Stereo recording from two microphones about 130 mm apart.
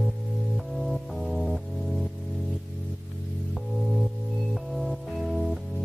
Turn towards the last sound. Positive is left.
turn(degrees=0)  # may be behind; listen again after turning